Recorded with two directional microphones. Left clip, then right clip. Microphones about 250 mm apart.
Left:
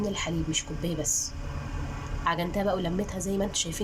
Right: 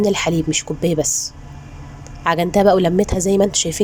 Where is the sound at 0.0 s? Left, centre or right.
Right.